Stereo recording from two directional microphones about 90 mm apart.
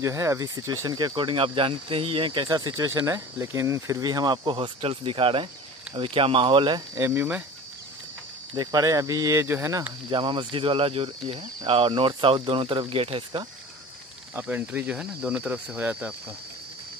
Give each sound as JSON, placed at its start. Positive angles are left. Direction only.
{"t": 0.0, "sound": "speech", "side_deg": -35}
{"t": 0.9, "sound": "speech", "side_deg": -55}
{"t": 3.1, "sound": "speech", "side_deg": -30}
{"t": 4.0, "sound": "speech", "side_deg": -50}
{"t": 4.6, "sound": "speech", "side_deg": -75}
{"t": 7.0, "sound": "speech", "side_deg": -25}
{"t": 8.5, "sound": "speech", "side_deg": -40}
{"t": 10.0, "sound": "speech", "side_deg": -65}
{"t": 14.4, "sound": "speech", "side_deg": -15}